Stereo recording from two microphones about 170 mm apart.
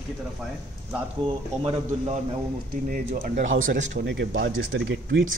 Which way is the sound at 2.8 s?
60° right (ahead or behind).